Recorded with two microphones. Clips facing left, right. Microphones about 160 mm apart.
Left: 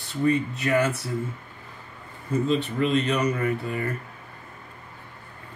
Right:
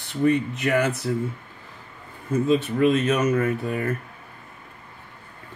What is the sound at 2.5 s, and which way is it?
Speech, 15° right (ahead or behind).